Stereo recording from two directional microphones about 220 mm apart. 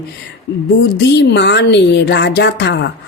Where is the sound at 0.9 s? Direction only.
50° left (ahead or behind).